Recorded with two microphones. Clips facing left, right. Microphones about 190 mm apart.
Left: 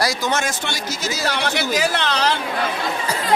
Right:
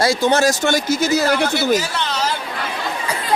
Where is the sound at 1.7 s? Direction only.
80° left.